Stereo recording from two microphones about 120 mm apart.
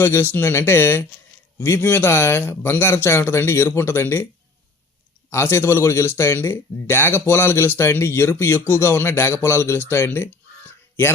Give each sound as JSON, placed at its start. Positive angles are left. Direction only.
{"t": 0.0, "sound": "speech", "side_deg": 20}
{"t": 5.3, "sound": "speech", "side_deg": 20}